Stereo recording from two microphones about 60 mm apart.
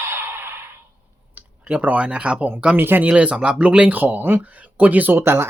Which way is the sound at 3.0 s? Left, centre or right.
Centre.